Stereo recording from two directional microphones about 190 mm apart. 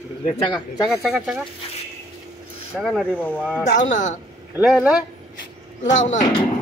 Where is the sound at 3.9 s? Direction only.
40° left (ahead or behind).